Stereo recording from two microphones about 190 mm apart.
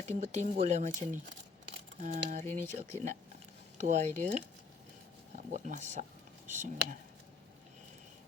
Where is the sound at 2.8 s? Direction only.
40° right (ahead or behind).